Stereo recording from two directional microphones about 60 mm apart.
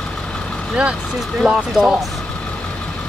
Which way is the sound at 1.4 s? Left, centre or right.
Centre.